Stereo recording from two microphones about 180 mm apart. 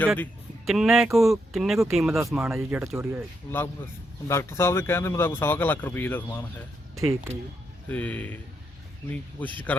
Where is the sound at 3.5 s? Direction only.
15° left (ahead or behind).